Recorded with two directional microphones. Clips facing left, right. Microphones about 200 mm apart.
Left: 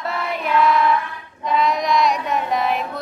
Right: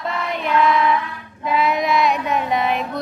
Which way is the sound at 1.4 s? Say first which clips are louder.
Even; 5° right (ahead or behind).